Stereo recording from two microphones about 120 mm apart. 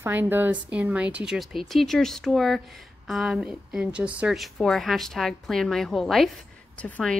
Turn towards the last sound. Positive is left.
turn(degrees=5)  # may be behind; listen again after turning